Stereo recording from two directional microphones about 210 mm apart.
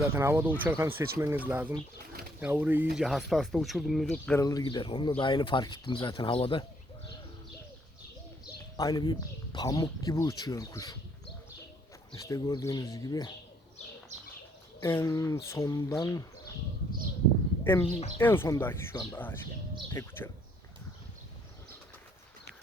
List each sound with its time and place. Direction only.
0.0 s speech: 10° right (ahead or behind)
4.4 s speech: 15° left (ahead or behind)
8.7 s speech: 15° left (ahead or behind)
12.1 s speech: 15° left (ahead or behind)
14.1 s bird: 35° right (ahead or behind)
14.8 s speech: 10° left (ahead or behind)
17.6 s speech: 10° left (ahead or behind)